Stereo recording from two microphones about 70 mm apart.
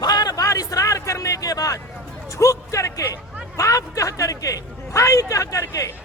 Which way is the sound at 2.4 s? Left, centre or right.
Left.